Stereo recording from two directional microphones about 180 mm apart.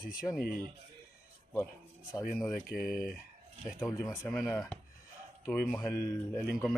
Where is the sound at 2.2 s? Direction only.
Centre (ahead or behind).